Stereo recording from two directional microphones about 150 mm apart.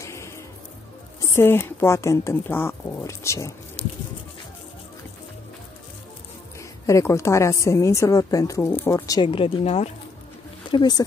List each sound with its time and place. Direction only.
0.0 s music: 20° left (ahead or behind)
1.3 s speech: 15° left (ahead or behind)
6.9 s a woman's voice: 20° left (ahead or behind)
9.3 s speech: 40° left (ahead or behind)
10.7 s a woman's voice: 30° left (ahead or behind)